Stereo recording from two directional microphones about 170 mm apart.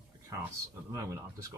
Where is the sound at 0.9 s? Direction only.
15° right (ahead or behind).